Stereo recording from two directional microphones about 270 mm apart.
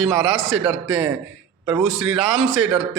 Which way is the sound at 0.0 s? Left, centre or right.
Centre.